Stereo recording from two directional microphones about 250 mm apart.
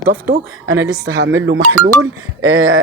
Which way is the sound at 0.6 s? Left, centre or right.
Right.